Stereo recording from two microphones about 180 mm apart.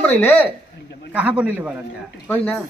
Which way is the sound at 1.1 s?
5° right (ahead or behind).